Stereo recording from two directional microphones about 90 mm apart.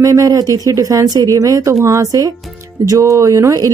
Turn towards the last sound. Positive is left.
turn(degrees=-40)  # may be behind; listen again after turning